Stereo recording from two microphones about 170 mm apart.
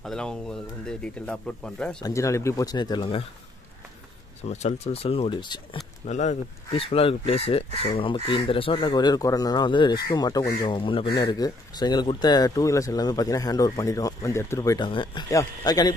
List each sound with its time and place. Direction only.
0.0 s speech: 5° left (ahead or behind)
2.0 s speech: 20° left (ahead or behind)
4.5 s speech: 40° left (ahead or behind)
6.0 s speech: 45° left (ahead or behind); by 15.9 s 20° left (ahead or behind)